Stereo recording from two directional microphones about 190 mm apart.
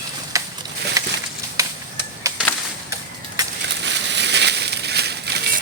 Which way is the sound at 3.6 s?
65° right (ahead or behind).